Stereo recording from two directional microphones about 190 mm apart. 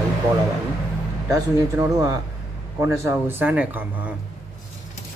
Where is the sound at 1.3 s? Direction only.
15° right (ahead or behind).